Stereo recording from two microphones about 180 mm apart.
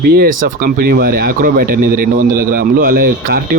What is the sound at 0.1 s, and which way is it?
Speech, 60° right (ahead or behind).